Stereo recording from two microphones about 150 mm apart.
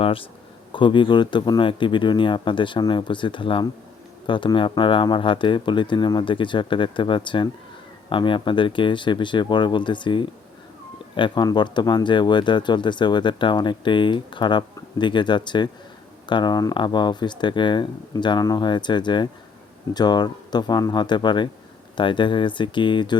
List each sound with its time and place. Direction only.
0.0 s speech: 35° left (ahead or behind)